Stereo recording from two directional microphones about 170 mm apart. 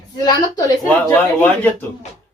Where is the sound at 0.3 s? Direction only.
20° left (ahead or behind).